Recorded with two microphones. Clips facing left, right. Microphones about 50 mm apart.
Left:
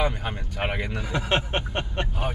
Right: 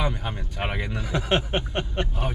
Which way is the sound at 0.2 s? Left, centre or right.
Centre.